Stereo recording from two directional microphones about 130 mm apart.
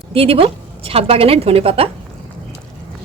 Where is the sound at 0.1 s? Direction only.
45° right (ahead or behind).